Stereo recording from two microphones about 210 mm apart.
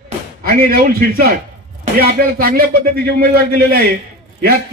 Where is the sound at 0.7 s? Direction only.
45° right (ahead or behind).